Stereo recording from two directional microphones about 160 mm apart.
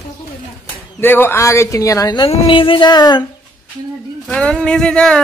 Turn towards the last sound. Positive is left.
turn(degrees=5)  # may be behind; listen again after turning